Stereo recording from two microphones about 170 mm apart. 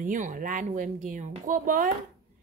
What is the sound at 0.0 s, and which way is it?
Speech, 50° right (ahead or behind).